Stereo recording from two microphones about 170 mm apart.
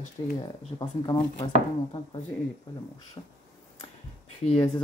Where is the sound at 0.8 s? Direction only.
25° left (ahead or behind).